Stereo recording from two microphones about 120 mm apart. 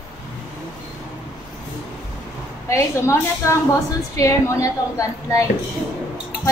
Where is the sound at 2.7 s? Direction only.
25° left (ahead or behind).